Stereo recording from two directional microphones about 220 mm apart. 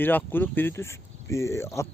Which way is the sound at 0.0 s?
10° left (ahead or behind).